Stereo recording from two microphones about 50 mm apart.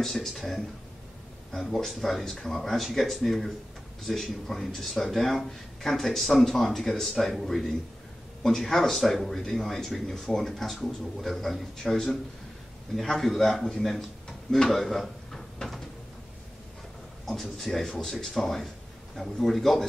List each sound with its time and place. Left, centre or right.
0.0 s speech: centre
17.3 s speech: centre